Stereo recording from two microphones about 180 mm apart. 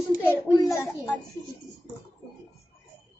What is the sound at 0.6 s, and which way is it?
Speech, 20° left (ahead or behind).